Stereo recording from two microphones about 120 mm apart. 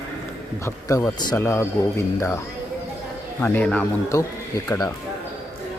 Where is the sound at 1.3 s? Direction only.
20° left (ahead or behind).